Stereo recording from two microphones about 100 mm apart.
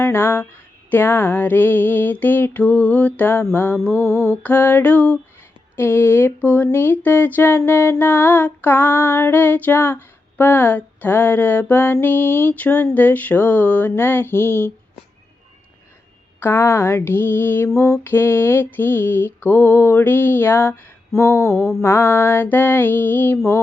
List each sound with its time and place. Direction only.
0.0 s a sound: 20° left (ahead or behind)
0.9 s speech: 20° left (ahead or behind)
4.0 s mantra: 25° right (ahead or behind)
4.4 s music: 20° left (ahead or behind)
5.7 s speech: 20° left (ahead or behind)
16.4 s speech: 25° left (ahead or behind)